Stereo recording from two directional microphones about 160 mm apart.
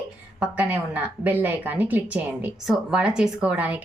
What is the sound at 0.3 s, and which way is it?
Speech, 10° right (ahead or behind).